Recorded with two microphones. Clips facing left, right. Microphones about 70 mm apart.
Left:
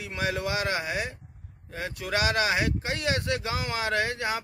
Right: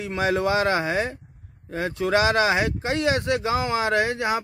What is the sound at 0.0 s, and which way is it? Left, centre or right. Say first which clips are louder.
Speech: right 7 dB; right.